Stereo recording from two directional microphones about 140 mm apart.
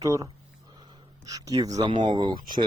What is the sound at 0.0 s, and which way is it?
Speech, 25° right (ahead or behind).